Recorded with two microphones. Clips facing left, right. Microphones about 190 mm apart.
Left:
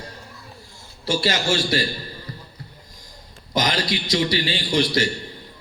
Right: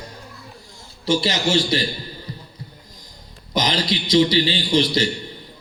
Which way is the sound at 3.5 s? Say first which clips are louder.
Right 1 dB; 20° right (ahead or behind).